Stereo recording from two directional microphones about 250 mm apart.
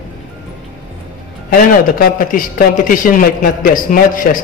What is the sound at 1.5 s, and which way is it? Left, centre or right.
A man's voice, left.